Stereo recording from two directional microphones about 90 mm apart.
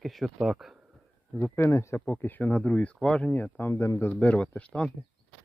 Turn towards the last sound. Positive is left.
turn(degrees=10)  # may be behind; listen again after turning